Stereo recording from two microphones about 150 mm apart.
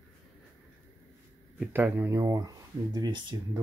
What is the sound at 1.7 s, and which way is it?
Speech, 15° right (ahead or behind).